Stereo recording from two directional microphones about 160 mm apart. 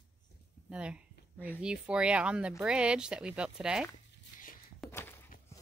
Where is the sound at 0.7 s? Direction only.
5° right (ahead or behind).